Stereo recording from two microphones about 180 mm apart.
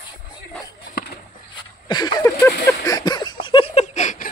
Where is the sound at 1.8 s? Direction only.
20° left (ahead or behind).